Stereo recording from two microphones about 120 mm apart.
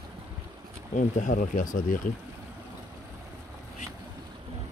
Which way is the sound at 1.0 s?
90° left.